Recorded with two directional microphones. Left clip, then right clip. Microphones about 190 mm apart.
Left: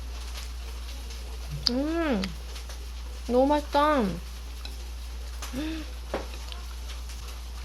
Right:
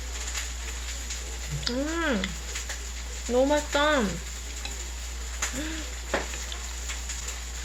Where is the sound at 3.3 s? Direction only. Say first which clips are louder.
Left 1 dB; 45° left (ahead or behind).